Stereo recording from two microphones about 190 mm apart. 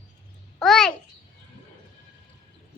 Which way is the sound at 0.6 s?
Centre (ahead or behind).